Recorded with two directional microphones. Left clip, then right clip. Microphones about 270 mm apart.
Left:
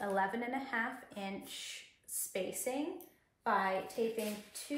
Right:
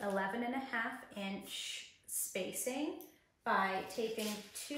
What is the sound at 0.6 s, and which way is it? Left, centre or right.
Speech, centre.